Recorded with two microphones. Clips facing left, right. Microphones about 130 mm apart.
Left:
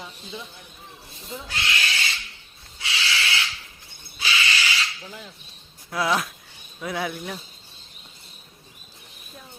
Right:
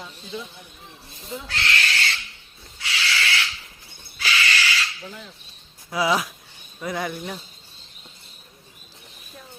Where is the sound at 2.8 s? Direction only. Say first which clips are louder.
Right 1 dB; 25° left (ahead or behind).